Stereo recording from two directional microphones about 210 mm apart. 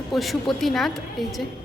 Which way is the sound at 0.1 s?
Centre (ahead or behind).